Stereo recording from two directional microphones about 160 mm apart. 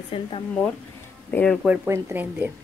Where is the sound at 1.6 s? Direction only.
10° right (ahead or behind).